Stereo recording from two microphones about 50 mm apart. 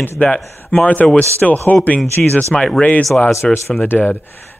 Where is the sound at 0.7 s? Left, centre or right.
Left.